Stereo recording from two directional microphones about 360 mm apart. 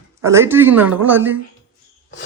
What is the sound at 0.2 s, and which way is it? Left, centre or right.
Speech, centre.